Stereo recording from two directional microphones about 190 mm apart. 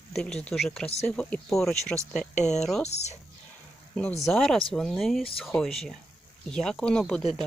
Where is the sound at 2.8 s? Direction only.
35° left (ahead or behind).